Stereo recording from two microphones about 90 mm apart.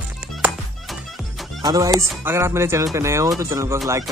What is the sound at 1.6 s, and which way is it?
Speech, 40° right (ahead or behind).